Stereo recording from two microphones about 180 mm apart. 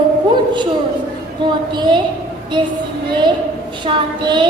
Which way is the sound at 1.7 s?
25° right (ahead or behind).